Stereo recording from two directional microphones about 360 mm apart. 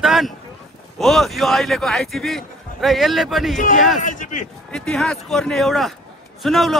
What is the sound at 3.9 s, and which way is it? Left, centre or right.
Speech, left.